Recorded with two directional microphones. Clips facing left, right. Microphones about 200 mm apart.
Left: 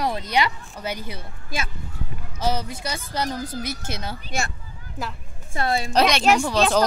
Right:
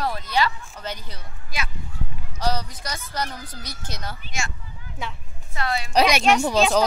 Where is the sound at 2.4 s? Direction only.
25° left (ahead or behind).